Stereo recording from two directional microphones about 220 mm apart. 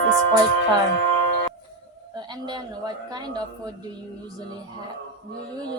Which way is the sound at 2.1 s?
20° right (ahead or behind).